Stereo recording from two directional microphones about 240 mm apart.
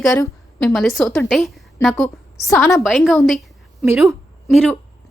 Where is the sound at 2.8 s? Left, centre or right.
Centre.